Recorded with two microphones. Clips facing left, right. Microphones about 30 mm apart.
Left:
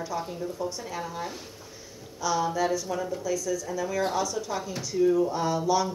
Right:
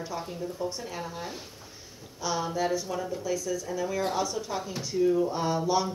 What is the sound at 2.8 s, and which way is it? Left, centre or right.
Speech, centre.